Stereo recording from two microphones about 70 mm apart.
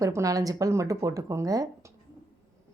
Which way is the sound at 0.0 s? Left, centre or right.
Right.